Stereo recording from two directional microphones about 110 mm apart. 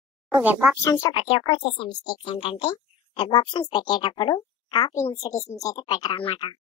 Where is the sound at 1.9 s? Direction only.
45° left (ahead or behind).